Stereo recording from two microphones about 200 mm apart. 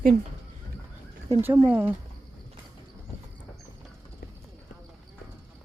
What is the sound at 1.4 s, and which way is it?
Speech, 10° right (ahead or behind).